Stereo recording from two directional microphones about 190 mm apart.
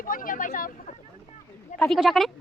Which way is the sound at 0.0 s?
45° left (ahead or behind).